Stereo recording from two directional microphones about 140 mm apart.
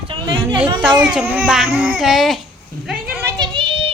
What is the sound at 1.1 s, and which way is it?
Speech, 10° right (ahead or behind).